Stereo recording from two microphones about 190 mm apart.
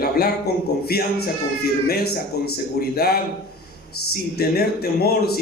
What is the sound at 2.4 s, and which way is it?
Speech, 55° left (ahead or behind).